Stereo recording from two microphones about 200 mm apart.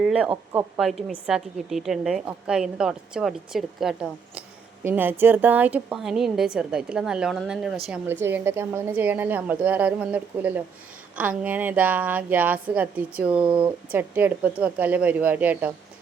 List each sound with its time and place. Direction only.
0.0 s a woman's voice: 5° right (ahead or behind)
13.4 s speech: 25° right (ahead or behind)
13.9 s a woman's voice: 10° right (ahead or behind)